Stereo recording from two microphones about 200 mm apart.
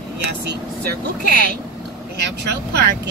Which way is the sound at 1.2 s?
50° right (ahead or behind).